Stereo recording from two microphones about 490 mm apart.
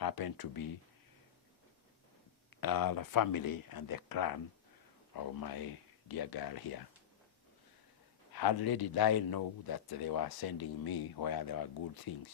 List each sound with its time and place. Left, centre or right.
0.0 s speech: left
2.5 s speech: left
8.3 s speech: left